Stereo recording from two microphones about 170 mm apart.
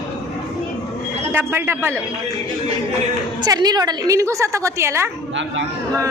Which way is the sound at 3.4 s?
25° right (ahead or behind).